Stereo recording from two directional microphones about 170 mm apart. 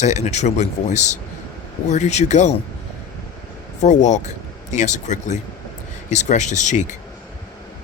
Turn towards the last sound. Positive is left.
turn(degrees=45)  # may be behind; listen again after turning